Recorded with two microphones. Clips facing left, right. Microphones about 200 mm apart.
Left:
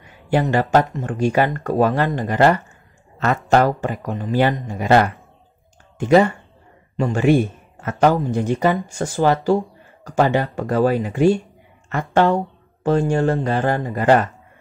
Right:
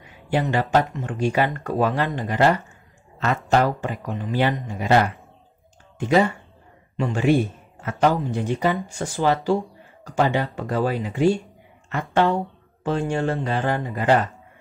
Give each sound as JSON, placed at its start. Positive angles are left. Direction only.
{"t": 0.3, "sound": "speech", "side_deg": 45}
{"t": 7.0, "sound": "speech", "side_deg": 45}